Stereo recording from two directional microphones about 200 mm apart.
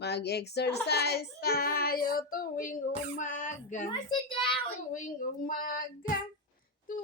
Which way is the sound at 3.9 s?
25° left (ahead or behind).